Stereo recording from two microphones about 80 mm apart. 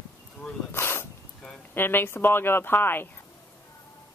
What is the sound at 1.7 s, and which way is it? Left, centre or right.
Speech, left.